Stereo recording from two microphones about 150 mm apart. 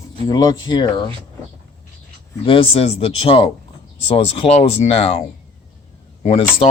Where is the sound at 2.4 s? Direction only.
40° left (ahead or behind).